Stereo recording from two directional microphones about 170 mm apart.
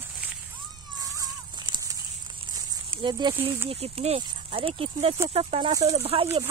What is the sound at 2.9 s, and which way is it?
Speech, 30° right (ahead or behind).